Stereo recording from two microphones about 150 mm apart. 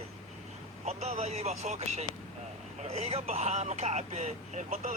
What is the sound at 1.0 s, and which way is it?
Speech, 45° right (ahead or behind).